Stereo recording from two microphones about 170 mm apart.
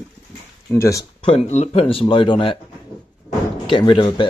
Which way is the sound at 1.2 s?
40° left (ahead or behind).